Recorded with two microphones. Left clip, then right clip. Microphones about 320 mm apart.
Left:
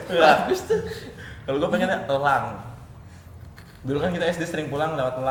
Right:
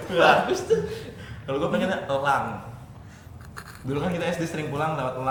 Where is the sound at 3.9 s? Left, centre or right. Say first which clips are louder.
Left 4 dB; left.